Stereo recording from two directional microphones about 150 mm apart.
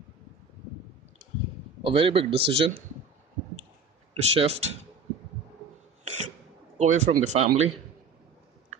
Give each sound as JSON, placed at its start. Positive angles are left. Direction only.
{"t": 1.8, "sound": "a man's voice", "side_deg": -35}
{"t": 4.1, "sound": "speech", "side_deg": -40}
{"t": 6.8, "sound": "speech", "side_deg": -50}